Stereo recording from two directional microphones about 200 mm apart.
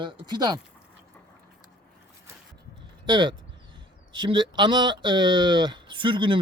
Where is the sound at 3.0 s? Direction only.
25° right (ahead or behind).